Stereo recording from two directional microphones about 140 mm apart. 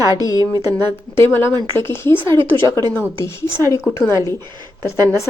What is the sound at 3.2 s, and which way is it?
Speech, 15° left (ahead or behind).